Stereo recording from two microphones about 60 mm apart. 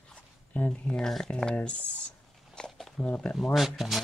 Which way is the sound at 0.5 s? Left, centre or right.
Left.